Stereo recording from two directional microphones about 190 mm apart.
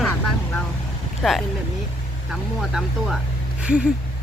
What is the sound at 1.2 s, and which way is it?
Speech, centre (ahead or behind).